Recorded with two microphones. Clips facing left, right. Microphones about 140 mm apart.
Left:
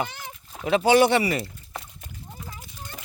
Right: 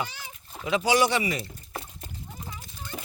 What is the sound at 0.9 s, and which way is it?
Speech, 60° left (ahead or behind).